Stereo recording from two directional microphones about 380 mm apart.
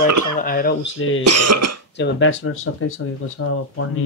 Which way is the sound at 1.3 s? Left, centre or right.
Right.